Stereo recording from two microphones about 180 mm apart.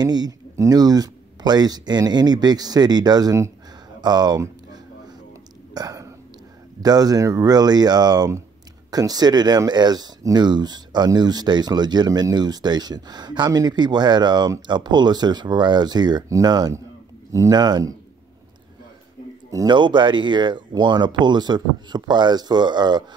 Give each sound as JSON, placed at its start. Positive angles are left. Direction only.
{"t": 0.0, "sound": "speech", "side_deg": -20}
{"t": 5.8, "sound": "whispering", "side_deg": -20}
{"t": 6.8, "sound": "speech", "side_deg": -20}
{"t": 19.5, "sound": "speech", "side_deg": -25}